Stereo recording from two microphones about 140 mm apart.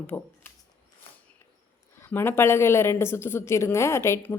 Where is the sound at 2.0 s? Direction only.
15° left (ahead or behind).